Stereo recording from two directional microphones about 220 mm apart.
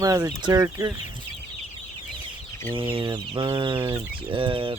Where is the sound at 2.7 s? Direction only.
25° right (ahead or behind).